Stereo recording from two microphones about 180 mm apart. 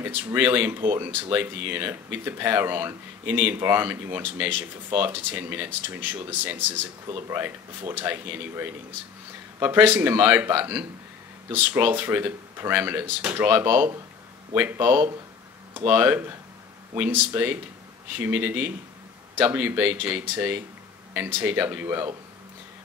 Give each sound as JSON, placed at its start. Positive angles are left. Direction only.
{"t": 0.0, "sound": "speech", "side_deg": -10}